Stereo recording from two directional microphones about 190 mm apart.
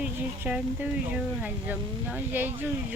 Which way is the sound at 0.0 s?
5° right (ahead or behind).